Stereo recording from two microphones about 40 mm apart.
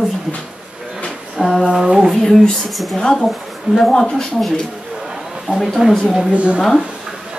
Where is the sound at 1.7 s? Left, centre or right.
Centre.